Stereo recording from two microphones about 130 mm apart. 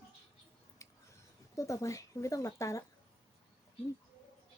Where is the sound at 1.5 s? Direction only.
25° left (ahead or behind).